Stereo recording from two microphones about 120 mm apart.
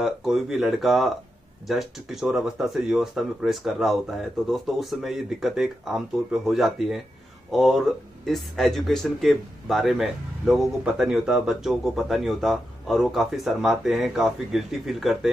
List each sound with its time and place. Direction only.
0.0 s speech: centre (ahead or behind)